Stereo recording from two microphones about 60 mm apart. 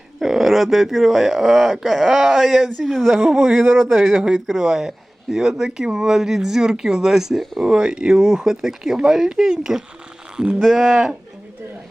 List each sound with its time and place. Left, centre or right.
0.2 s speech: centre